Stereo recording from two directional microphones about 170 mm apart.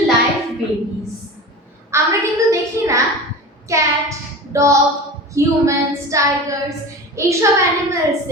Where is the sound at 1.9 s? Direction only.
15° right (ahead or behind).